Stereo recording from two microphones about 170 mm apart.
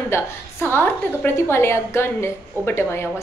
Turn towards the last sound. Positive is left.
turn(degrees=15)  # may be behind; listen again after turning